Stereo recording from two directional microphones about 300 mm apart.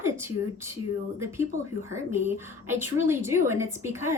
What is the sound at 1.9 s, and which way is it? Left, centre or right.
A woman's voice, centre.